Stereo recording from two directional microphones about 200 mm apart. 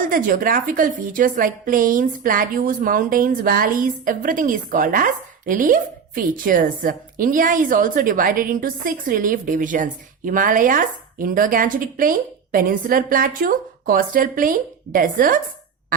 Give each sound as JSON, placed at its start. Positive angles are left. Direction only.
{"t": 0.0, "sound": "a woman's voice", "side_deg": -45}